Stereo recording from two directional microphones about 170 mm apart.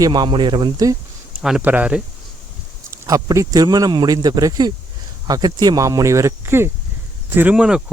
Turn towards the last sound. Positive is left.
turn(degrees=-5)  # may be behind; listen again after turning